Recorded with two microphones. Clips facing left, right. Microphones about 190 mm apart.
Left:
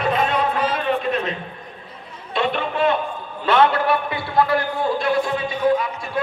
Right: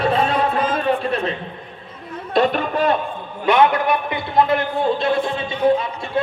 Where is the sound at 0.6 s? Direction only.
45° right (ahead or behind).